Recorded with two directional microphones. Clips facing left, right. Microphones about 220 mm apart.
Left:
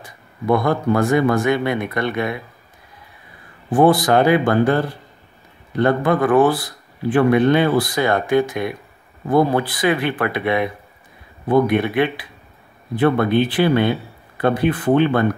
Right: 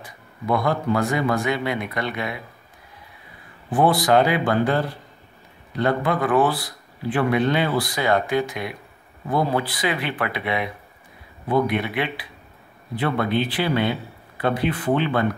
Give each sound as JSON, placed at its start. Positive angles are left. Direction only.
{"t": 0.5, "sound": "a man's voice", "side_deg": 50}
{"t": 3.7, "sound": "a man's voice", "side_deg": 45}